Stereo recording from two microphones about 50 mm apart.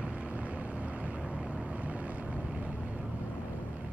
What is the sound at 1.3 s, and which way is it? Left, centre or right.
Boat, right.